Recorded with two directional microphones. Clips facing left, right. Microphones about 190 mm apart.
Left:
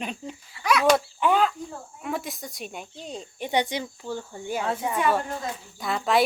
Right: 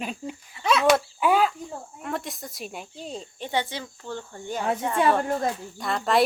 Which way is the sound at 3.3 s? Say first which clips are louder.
Left 4 dB; 15° left (ahead or behind).